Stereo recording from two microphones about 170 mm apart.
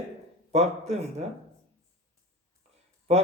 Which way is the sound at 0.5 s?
40° right (ahead or behind).